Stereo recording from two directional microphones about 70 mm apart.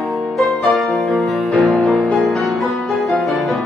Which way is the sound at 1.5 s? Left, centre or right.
Centre.